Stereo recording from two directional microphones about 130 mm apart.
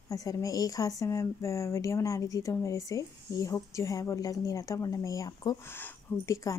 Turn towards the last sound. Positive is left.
turn(degrees=25)  # may be behind; listen again after turning